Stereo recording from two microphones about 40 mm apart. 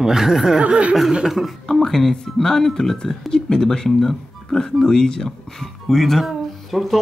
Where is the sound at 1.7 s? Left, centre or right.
Centre.